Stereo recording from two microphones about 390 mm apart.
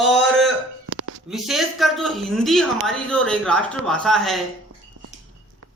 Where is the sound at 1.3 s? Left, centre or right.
Centre.